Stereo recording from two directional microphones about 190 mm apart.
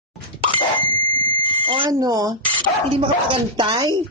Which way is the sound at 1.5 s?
25° right (ahead or behind).